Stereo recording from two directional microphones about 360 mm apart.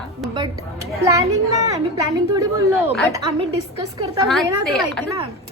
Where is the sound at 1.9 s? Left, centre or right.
Centre.